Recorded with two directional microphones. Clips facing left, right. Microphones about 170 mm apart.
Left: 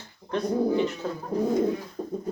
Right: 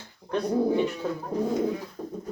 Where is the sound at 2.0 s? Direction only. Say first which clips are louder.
Left 2 dB; 20° left (ahead or behind).